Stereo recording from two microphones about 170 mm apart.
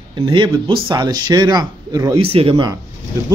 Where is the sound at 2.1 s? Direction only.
35° right (ahead or behind).